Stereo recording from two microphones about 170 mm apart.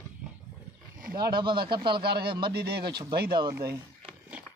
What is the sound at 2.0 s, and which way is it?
Speech, 70° right (ahead or behind).